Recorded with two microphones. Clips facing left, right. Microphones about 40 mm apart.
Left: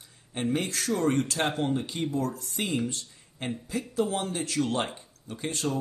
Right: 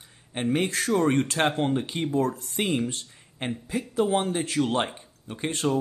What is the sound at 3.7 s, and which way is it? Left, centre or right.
A man's voice, right.